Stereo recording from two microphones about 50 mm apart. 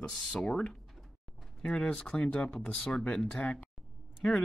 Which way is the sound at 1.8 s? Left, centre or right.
Left.